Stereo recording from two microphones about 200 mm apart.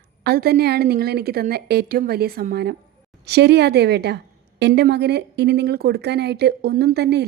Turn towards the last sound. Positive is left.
turn(degrees=-55)  # may be behind; listen again after turning